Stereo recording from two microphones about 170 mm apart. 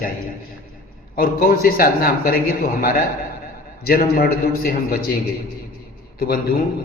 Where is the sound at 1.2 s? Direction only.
60° left (ahead or behind).